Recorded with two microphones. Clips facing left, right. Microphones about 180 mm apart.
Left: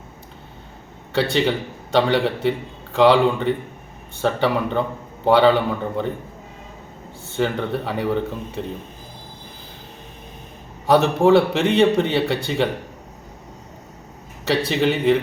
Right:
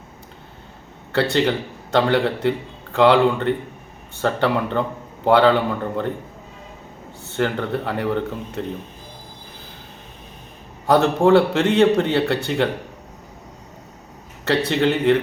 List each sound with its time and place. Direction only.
1.1 s a man's voice: centre (ahead or behind)
7.3 s a man's voice: 5° left (ahead or behind)
10.8 s a man's voice: centre (ahead or behind)
14.5 s a man's voice: 5° left (ahead or behind)